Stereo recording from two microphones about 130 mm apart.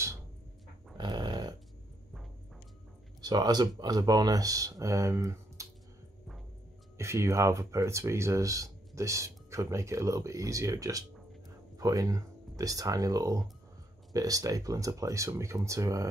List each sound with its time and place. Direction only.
0.9 s dog: 35° right (ahead or behind)
3.2 s speech: 30° right (ahead or behind)
7.0 s speech: 20° right (ahead or behind)